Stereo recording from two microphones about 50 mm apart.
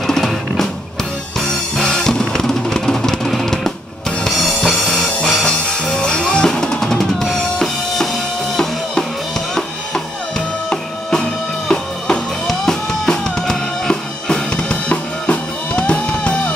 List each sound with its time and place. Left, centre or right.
0.0 s music: centre
5.4 s drum kit: centre
10.7 s drum kit: centre
12.4 s drum: centre